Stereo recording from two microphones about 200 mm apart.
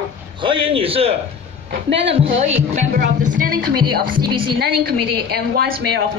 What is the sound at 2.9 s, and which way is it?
A woman's voice, 50° right (ahead or behind).